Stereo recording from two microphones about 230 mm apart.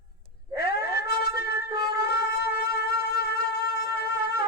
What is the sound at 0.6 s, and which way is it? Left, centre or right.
Music, left.